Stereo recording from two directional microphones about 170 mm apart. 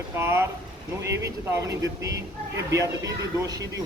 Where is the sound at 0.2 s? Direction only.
15° right (ahead or behind).